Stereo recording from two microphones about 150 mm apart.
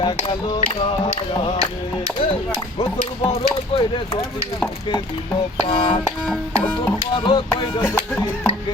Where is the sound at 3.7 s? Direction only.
35° left (ahead or behind).